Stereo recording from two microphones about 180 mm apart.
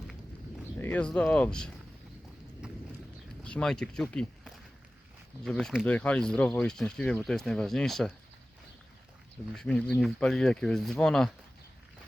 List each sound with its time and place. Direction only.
0.8 s speech: 10° left (ahead or behind)
2.6 s horse: 5° right (ahead or behind)
3.4 s speech: 5° left (ahead or behind)
9.6 s speech: 5° left (ahead or behind)